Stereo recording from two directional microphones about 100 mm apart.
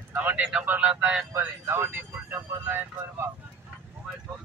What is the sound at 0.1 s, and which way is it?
A man's voice, 20° right (ahead or behind).